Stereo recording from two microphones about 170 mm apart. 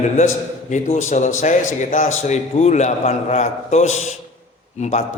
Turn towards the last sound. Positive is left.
turn(degrees=45)  # may be behind; listen again after turning